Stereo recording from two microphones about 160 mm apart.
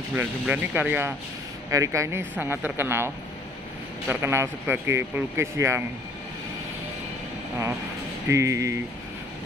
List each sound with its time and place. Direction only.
0.1 s speech: 10° right (ahead or behind)
4.1 s speech: 15° right (ahead or behind)
8.3 s speech: 20° right (ahead or behind)